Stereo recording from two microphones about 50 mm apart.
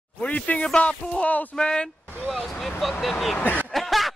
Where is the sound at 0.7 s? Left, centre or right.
Centre.